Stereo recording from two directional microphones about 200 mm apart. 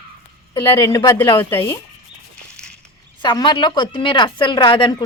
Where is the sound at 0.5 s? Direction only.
25° left (ahead or behind).